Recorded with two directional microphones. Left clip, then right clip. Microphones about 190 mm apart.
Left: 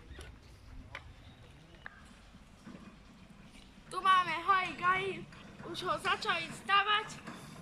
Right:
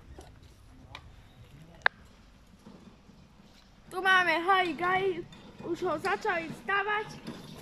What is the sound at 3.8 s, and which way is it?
A woman's voice, 50° right (ahead or behind).